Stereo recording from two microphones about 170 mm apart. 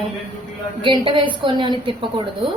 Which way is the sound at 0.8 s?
30° right (ahead or behind).